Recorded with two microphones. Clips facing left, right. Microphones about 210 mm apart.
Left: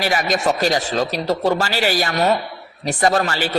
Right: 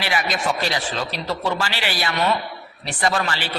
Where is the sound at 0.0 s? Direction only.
40° left (ahead or behind).